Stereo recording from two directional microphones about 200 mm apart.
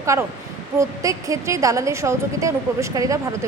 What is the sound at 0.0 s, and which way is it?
A woman's voice, 15° right (ahead or behind).